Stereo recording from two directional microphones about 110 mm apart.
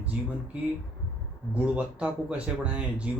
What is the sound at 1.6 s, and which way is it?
Speech, 10° right (ahead or behind).